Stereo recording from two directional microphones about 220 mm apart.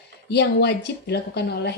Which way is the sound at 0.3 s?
50° left (ahead or behind).